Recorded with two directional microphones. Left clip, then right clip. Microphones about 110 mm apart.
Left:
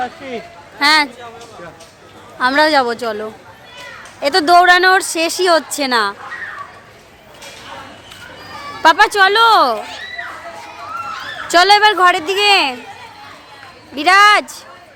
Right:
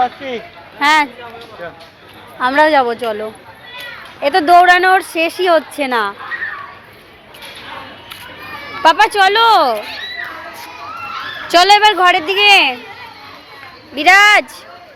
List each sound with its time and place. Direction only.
0.0 s speech: centre (ahead or behind)
0.8 s a woman's voice: 20° left (ahead or behind)
2.4 s a woman's voice: 25° left (ahead or behind)
8.8 s a woman's voice: 25° left (ahead or behind)
11.4 s a woman's voice: 20° left (ahead or behind)
13.9 s a woman's voice: 15° left (ahead or behind)